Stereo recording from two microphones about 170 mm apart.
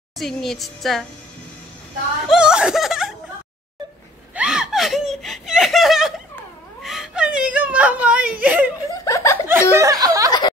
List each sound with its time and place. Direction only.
0.2 s a woman's voice: centre (ahead or behind)
2.2 s laughter: 5° right (ahead or behind)
4.4 s laughter: 5° right (ahead or behind)
6.8 s whimper: centre (ahead or behind)
9.0 s laughter: 15° left (ahead or behind)
9.5 s a sound: 15° right (ahead or behind)